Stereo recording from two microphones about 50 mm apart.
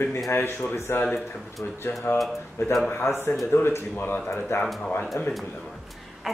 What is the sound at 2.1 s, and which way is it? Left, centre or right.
Speech, left.